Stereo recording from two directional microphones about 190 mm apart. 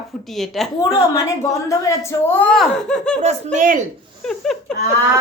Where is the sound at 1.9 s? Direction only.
10° left (ahead or behind).